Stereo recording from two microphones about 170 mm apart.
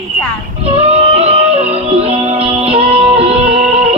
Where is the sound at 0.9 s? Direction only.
40° right (ahead or behind).